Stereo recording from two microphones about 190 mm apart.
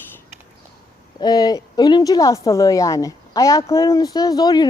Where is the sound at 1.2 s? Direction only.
20° left (ahead or behind).